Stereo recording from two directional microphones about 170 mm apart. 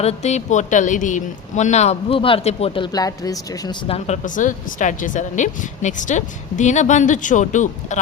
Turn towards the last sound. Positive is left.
turn(degrees=45)  # may be behind; listen again after turning